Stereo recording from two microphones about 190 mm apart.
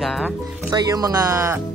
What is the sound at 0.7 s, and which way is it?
Speech, 20° right (ahead or behind).